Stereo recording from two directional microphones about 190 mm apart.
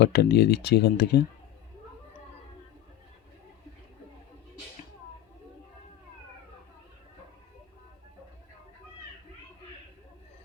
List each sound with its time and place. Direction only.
0.0 s speech: 60° left (ahead or behind)